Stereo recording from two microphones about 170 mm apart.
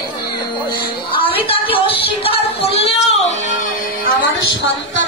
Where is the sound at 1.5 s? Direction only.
35° left (ahead or behind).